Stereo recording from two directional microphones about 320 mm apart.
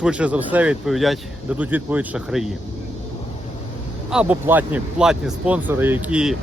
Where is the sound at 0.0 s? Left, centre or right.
Centre.